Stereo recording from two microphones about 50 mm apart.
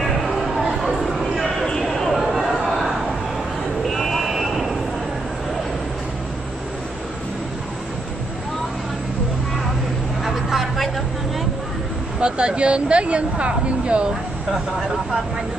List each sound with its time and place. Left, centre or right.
0.0 s a sound: centre
3.8 s sheep: centre
10.2 s vehicle: centre
12.2 s speech: centre